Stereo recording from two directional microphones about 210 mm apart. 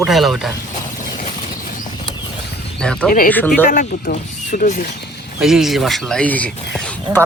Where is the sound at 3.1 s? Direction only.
40° left (ahead or behind).